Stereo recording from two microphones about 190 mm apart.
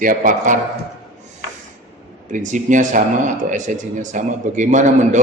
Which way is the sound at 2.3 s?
40° right (ahead or behind).